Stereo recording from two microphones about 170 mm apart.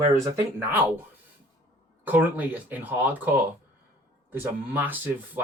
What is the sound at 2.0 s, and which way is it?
Speech, 10° right (ahead or behind).